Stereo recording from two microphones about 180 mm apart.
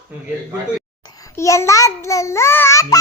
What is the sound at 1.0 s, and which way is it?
A child's voice, 20° left (ahead or behind).